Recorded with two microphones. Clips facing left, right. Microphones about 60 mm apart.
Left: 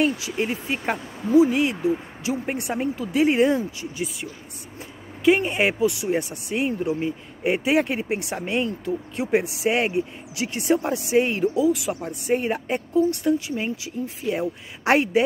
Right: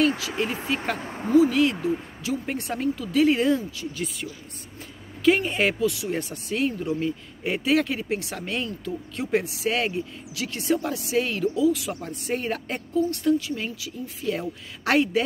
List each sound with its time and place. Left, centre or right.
0.4 s speech: left
0.9 s speech: right
1.3 s speech: centre